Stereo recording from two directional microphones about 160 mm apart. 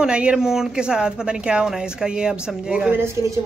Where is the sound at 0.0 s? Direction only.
5° right (ahead or behind).